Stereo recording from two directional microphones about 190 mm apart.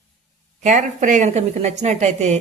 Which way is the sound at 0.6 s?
40° right (ahead or behind).